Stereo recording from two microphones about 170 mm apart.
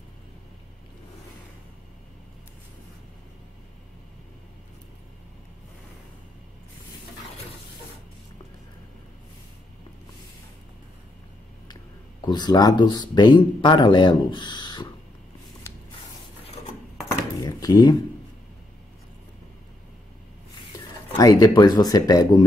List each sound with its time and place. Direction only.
11.6 s speech: 25° left (ahead or behind)
17.4 s a sound: 25° left (ahead or behind)
21.2 s speech: 20° left (ahead or behind)